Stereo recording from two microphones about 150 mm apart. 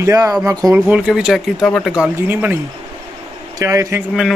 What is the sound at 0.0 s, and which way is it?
Speech, 20° right (ahead or behind).